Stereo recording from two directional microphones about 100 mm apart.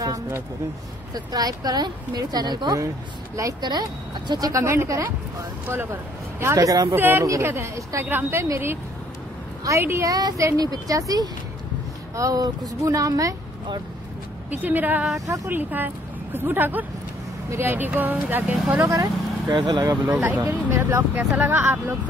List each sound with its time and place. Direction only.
1.1 s speech: 40° right (ahead or behind)
4.3 s speech: 35° right (ahead or behind); by 5.9 s 20° right (ahead or behind)
6.5 s speech: 35° right (ahead or behind)
7.0 s speech: 20° right (ahead or behind)
14.5 s a woman's voice: 20° right (ahead or behind)
15.1 s speech: 35° right (ahead or behind)
15.5 s speech: 20° right (ahead or behind)
18.9 s speech: 35° right (ahead or behind)
19.5 s speech: 45° right (ahead or behind)
20.1 s speech: 15° right (ahead or behind)